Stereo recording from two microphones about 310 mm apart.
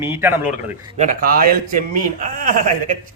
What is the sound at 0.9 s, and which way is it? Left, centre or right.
Speech, right.